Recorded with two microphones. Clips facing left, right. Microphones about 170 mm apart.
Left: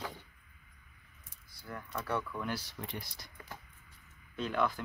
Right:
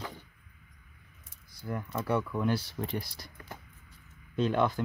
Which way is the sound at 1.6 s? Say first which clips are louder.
Right 7 dB; 20° right (ahead or behind).